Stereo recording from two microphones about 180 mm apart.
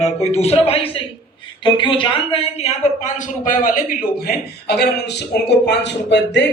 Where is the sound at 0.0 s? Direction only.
35° left (ahead or behind).